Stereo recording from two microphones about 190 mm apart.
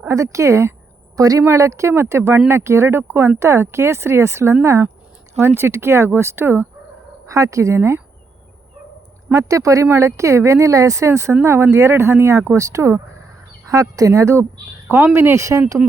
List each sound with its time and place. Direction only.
0.0 s speech: 15° right (ahead or behind)
9.3 s speech: 15° right (ahead or behind)